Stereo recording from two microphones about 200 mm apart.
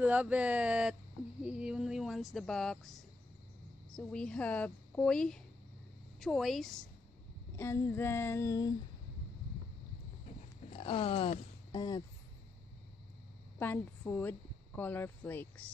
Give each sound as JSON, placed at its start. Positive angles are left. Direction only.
{"t": 0.0, "sound": "speech", "side_deg": -5}
{"t": 7.5, "sound": "female singing", "side_deg": 10}
{"t": 10.7, "sound": "speech", "side_deg": 25}
{"t": 13.6, "sound": "a woman's voice", "side_deg": 10}
{"t": 14.8, "sound": "female singing", "side_deg": 10}